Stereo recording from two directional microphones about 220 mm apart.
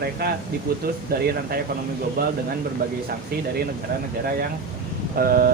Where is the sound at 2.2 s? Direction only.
45° right (ahead or behind).